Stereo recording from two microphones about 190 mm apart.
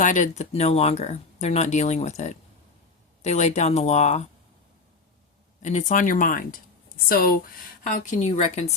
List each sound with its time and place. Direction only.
0.0 s speech: 40° left (ahead or behind)
5.6 s speech: 40° left (ahead or behind)